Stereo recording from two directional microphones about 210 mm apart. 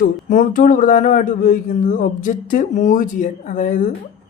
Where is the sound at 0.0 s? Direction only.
40° left (ahead or behind).